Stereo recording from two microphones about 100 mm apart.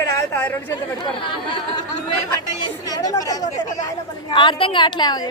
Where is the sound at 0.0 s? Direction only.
30° left (ahead or behind).